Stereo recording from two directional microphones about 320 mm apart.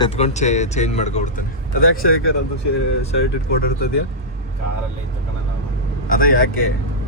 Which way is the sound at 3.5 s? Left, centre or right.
Left.